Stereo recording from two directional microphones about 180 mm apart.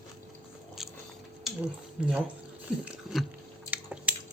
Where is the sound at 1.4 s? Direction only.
5° right (ahead or behind).